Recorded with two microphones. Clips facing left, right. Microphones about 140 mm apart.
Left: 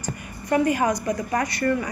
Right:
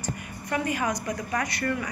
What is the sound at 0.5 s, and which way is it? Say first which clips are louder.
A woman's voice: left 7 dB; 40° left (ahead or behind).